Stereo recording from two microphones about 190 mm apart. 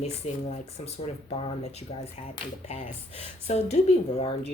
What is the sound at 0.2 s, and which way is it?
Speech, 35° left (ahead or behind).